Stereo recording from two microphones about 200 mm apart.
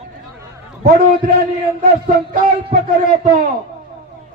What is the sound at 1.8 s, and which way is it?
A man's voice, 45° right (ahead or behind).